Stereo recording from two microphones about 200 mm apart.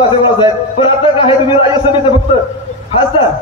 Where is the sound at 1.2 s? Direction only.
25° left (ahead or behind).